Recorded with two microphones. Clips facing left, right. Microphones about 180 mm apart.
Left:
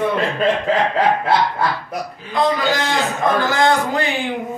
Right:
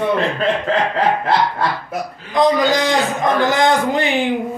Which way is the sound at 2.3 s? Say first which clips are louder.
Right 4 dB; 15° right (ahead or behind).